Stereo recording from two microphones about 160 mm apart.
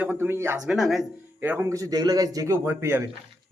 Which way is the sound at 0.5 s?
Centre (ahead or behind).